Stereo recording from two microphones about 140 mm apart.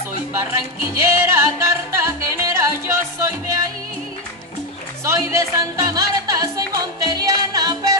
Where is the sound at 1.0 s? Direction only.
20° right (ahead or behind).